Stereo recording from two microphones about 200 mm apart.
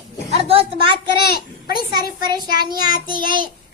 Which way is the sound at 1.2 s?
50° left (ahead or behind).